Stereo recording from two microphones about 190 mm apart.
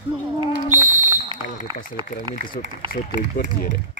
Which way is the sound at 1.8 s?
50° left (ahead or behind).